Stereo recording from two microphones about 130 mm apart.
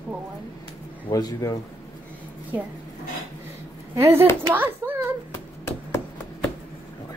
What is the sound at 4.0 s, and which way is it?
A child's voice, 20° right (ahead or behind).